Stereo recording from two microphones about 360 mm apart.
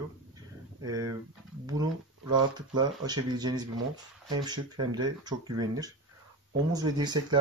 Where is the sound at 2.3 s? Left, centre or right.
Centre.